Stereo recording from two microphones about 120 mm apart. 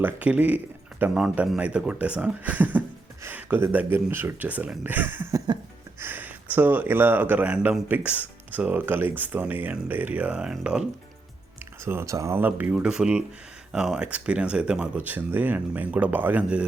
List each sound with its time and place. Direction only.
0.0 s speech: 15° right (ahead or behind)
11.9 s speech: 25° right (ahead or behind)